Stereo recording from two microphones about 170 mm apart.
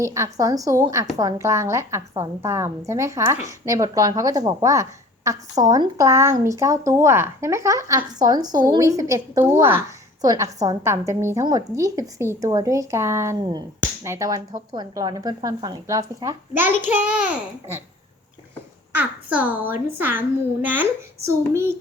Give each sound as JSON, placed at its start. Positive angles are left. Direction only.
{"t": 0.0, "sound": "a woman's voice", "side_deg": -15}
{"t": 18.9, "sound": "a woman's voice", "side_deg": -10}